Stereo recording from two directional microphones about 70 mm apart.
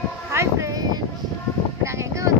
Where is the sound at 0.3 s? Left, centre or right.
Right.